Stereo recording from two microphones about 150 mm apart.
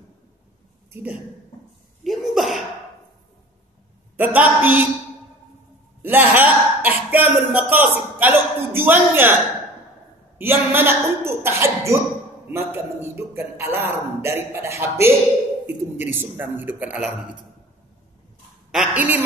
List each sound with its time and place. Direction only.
2.0 s sneeze: centre (ahead or behind)
4.2 s a man's voice: 10° right (ahead or behind)
6.0 s speech: 15° right (ahead or behind)
10.3 s a man's voice: 15° right (ahead or behind)
18.7 s a man's voice: 5° right (ahead or behind)